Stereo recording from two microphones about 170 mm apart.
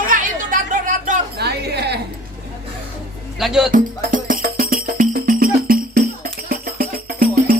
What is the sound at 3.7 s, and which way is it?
Music, 55° right (ahead or behind).